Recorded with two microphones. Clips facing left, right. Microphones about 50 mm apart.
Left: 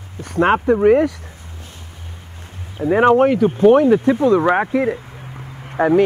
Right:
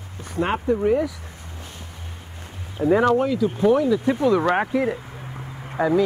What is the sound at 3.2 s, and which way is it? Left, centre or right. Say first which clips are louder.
A man's voice: left 7 dB; left.